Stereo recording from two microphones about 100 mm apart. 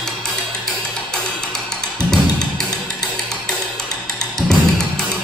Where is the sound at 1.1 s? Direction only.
5° left (ahead or behind).